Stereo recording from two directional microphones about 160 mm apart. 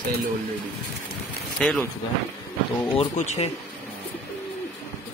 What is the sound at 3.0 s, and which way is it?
Speech, 40° left (ahead or behind).